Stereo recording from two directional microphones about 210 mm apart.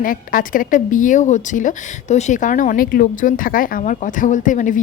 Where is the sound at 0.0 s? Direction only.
40° left (ahead or behind).